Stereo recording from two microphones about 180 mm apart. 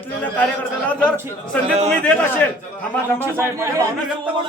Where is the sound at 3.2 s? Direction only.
15° right (ahead or behind).